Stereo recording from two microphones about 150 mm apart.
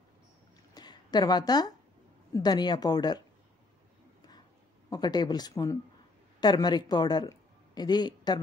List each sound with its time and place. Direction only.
0.7 s a sound: 25° left (ahead or behind)
2.3 s speech: 25° left (ahead or behind)
4.8 s speech: 25° left (ahead or behind)